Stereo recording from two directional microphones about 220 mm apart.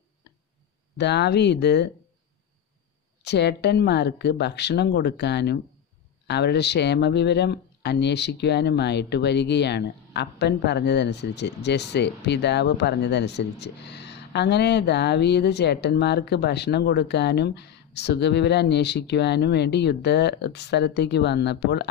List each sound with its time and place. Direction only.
0.9 s speech: 50° left (ahead or behind)
3.2 s speech: 50° left (ahead or behind)